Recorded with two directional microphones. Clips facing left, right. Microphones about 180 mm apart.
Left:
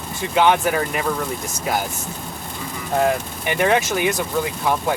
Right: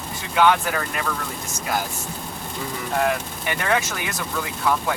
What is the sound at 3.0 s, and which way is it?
Speech, 25° left (ahead or behind).